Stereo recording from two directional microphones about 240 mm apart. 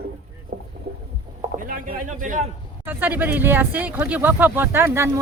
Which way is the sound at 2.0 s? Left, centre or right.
Right.